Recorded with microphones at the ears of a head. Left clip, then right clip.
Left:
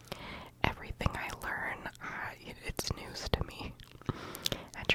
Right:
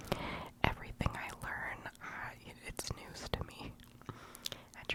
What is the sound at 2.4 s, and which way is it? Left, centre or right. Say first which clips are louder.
Whispering: left 6 dB; left.